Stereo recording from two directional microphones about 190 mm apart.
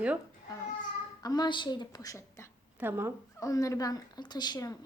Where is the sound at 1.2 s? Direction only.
20° left (ahead or behind).